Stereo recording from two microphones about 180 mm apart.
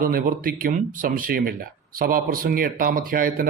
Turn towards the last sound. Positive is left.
turn(degrees=-50)  # may be behind; listen again after turning